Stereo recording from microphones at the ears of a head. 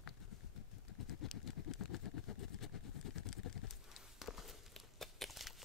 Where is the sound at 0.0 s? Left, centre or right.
Left.